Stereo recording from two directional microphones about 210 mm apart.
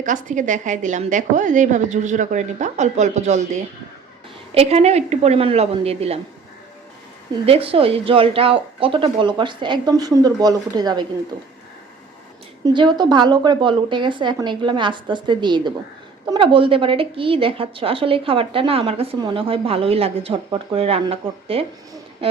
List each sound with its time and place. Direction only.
0.0 s a woman's voice: 35° right (ahead or behind)
7.4 s a woman's voice: 25° right (ahead or behind)
12.6 s a woman's voice: 20° right (ahead or behind)